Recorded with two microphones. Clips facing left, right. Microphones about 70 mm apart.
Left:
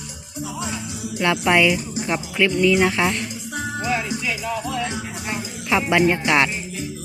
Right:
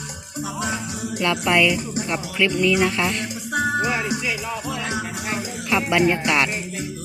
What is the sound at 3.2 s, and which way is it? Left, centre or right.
Music, right.